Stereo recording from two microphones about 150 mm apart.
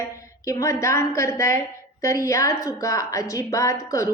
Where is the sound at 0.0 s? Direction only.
20° left (ahead or behind).